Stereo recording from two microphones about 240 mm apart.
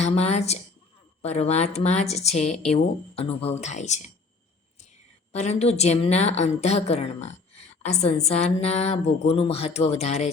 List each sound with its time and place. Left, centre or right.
0.0 s a woman's voice: left
5.3 s a woman's voice: left